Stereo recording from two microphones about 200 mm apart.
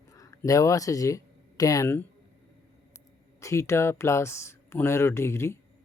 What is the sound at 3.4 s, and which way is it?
Speech, 15° left (ahead or behind).